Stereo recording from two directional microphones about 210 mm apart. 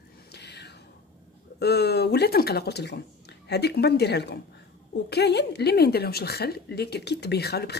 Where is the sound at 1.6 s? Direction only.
50° left (ahead or behind).